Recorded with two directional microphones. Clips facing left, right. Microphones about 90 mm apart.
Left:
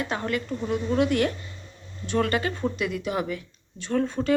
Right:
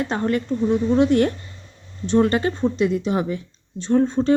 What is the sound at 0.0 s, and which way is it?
Speech, 35° right (ahead or behind).